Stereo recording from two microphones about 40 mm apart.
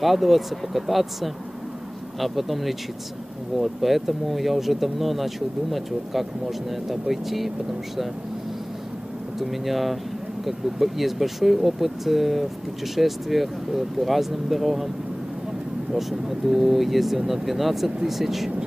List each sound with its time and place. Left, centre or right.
0.0 s speech: centre
9.4 s speech: centre
15.9 s speech: centre